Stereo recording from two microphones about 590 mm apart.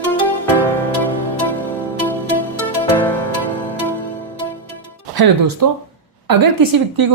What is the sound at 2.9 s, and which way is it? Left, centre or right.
Music, centre.